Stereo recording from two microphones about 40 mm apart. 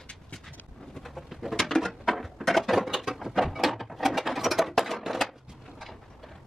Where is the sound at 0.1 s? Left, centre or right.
Left.